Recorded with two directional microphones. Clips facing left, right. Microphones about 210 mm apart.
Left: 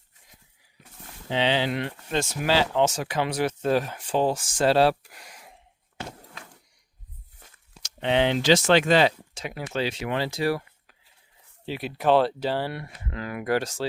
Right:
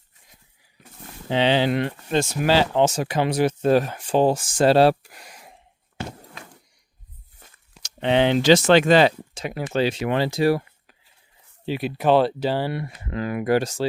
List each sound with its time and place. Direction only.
1.3 s speech: 45° right (ahead or behind)
2.0 s speech: 30° right (ahead or behind)
3.7 s speech: 50° right (ahead or behind)
4.0 s speech: 30° right (ahead or behind)
6.0 s walk: 5° right (ahead or behind)
8.0 s speech: 45° right (ahead or behind)
10.3 s a sound: 20° right (ahead or behind)
11.6 s speech: 10° right (ahead or behind)
13.1 s speech: 25° right (ahead or behind)